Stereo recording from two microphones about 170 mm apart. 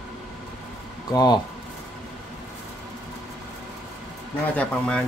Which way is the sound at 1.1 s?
25° left (ahead or behind).